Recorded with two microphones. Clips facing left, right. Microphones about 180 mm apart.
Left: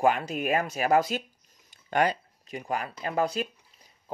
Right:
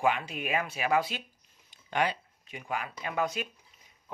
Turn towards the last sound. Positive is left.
turn(degrees=35)  # may be behind; listen again after turning